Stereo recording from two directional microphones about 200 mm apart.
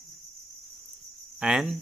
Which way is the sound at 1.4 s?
5° right (ahead or behind).